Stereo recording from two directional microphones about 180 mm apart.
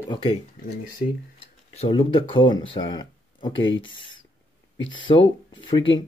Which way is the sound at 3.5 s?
90° left.